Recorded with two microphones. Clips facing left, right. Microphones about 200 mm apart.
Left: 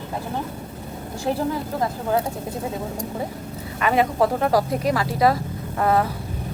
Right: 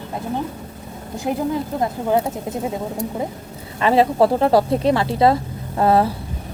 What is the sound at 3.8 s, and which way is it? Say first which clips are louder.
Speech: right 4 dB; 30° right (ahead or behind).